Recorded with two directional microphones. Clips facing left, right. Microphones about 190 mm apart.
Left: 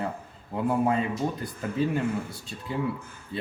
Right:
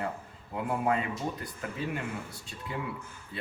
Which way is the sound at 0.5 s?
30° left (ahead or behind).